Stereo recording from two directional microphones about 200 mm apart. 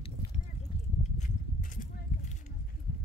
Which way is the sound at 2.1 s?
45° left (ahead or behind).